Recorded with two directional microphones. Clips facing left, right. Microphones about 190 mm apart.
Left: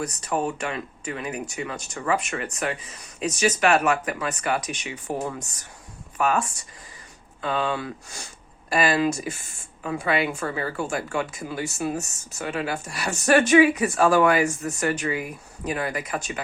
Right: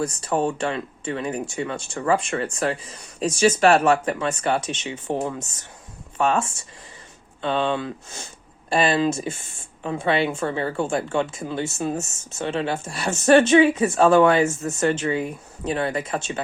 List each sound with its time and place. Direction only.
0.0 s speech: 30° right (ahead or behind)